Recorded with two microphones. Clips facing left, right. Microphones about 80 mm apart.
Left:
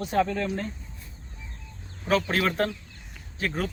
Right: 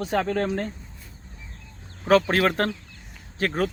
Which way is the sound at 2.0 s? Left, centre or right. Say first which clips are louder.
Right 5 dB; right.